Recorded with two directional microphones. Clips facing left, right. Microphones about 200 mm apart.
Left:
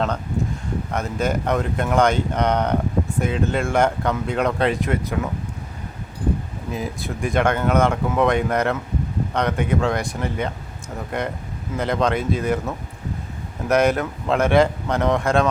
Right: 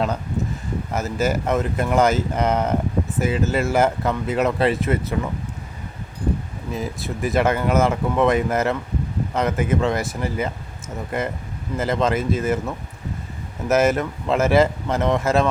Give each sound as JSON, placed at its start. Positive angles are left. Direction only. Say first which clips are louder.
{"t": 0.9, "sound": "speech", "louder": "right 2 dB", "side_deg": -5}
{"t": 6.7, "sound": "speech", "louder": "even", "side_deg": 0}